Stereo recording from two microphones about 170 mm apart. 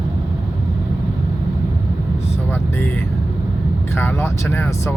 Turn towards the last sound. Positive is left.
turn(degrees=15)  # may be behind; listen again after turning